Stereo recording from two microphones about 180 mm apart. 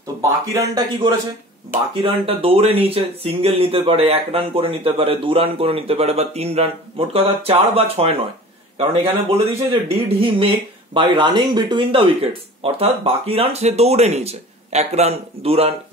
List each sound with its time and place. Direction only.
0.2 s speech: 15° right (ahead or behind)
2.0 s speech: 30° right (ahead or behind)